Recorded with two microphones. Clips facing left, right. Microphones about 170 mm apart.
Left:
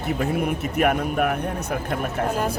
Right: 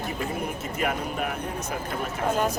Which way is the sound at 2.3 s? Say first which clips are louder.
Right 4 dB; 5° left (ahead or behind).